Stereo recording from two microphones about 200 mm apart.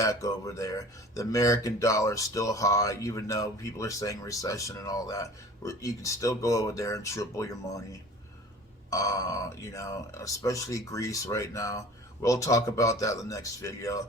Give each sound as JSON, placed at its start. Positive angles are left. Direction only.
{"t": 0.0, "sound": "speech", "side_deg": 15}
{"t": 8.9, "sound": "speech", "side_deg": 15}